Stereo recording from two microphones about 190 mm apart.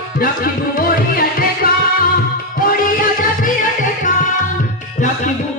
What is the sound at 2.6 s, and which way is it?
Music, 50° left (ahead or behind).